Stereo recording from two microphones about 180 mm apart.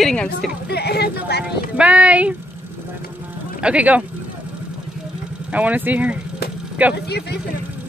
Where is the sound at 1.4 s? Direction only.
5° right (ahead or behind).